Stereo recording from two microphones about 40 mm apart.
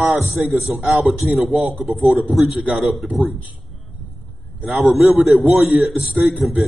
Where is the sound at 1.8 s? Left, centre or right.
Centre.